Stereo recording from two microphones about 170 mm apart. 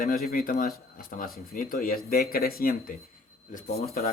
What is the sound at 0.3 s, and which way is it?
Speech, 60° left (ahead or behind).